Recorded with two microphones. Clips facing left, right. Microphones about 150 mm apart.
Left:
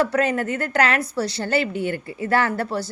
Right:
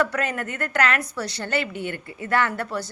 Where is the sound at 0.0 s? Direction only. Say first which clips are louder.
Left 4 dB; 30° left (ahead or behind).